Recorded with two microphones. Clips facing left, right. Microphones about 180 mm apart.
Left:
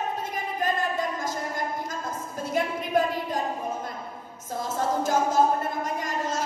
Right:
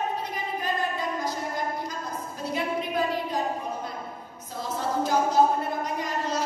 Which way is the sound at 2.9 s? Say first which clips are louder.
Left 5 dB; 50° left (ahead or behind).